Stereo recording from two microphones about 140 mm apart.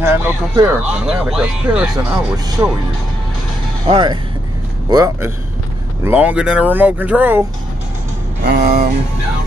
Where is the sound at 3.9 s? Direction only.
35° right (ahead or behind).